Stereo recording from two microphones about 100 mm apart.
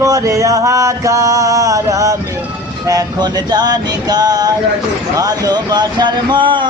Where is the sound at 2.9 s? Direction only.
40° right (ahead or behind).